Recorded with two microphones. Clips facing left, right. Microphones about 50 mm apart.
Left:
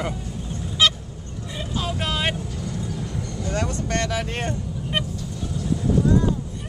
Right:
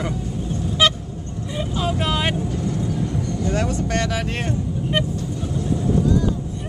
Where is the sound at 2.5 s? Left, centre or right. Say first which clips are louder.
Right 7 dB; right.